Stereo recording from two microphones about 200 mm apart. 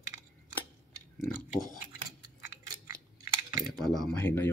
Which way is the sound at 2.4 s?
15° right (ahead or behind).